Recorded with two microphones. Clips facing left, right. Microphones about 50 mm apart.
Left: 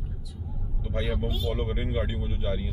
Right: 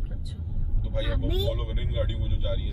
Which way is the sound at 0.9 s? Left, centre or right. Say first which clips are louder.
Even; left.